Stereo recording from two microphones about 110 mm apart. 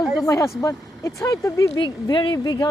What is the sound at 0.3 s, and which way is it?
Speech, 30° left (ahead or behind).